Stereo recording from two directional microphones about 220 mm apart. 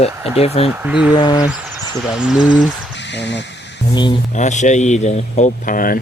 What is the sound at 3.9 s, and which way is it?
Speech, 20° left (ahead or behind).